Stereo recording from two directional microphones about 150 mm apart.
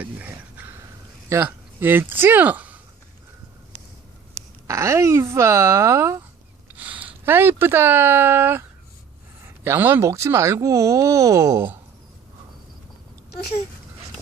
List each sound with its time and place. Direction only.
0.0 s a sound: 10° right (ahead or behind)
1.3 s speech: 15° right (ahead or behind)
4.6 s speech: 20° right (ahead or behind)
9.6 s speech: 15° right (ahead or behind)